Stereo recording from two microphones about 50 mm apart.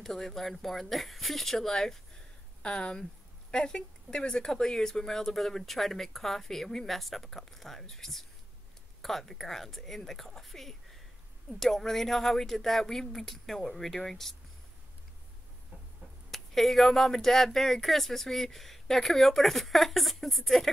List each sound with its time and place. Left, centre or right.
0.0 s speech: centre
2.6 s speech: centre
16.3 s speech: centre